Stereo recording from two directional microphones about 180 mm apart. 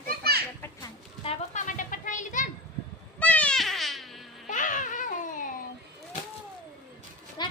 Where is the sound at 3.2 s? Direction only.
10° left (ahead or behind).